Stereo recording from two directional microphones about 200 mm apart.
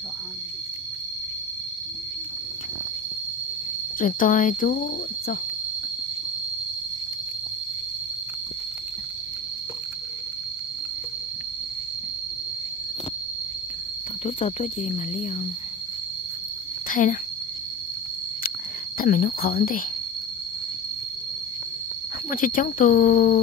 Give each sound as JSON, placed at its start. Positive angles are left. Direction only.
{"t": 4.0, "sound": "speech", "side_deg": 40}
{"t": 14.2, "sound": "speech", "side_deg": 30}
{"t": 16.9, "sound": "speech", "side_deg": 40}
{"t": 18.9, "sound": "speech", "side_deg": 45}
{"t": 22.3, "sound": "speech", "side_deg": 45}